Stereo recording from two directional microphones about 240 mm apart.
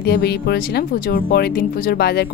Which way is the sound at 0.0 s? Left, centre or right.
Left.